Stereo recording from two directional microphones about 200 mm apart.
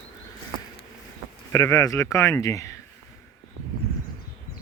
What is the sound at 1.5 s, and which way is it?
Speech, 15° left (ahead or behind).